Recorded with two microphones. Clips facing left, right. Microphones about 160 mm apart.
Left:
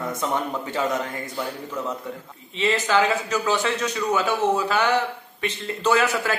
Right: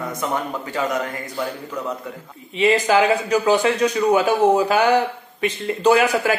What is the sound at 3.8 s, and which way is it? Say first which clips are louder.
Speech: right 7 dB; 30° right (ahead or behind).